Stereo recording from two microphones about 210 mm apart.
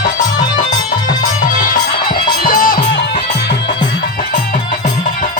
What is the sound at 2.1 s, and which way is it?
Music, 40° left (ahead or behind).